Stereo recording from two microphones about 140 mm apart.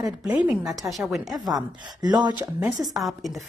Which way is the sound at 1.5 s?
30° right (ahead or behind).